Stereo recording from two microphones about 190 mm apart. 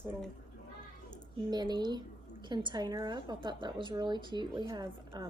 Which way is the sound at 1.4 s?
20° right (ahead or behind).